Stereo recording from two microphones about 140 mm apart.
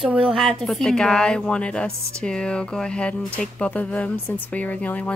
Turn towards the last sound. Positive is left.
turn(degrees=10)  # may be behind; listen again after turning